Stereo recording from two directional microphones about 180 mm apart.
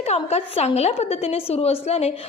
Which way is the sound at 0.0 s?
35° left (ahead or behind).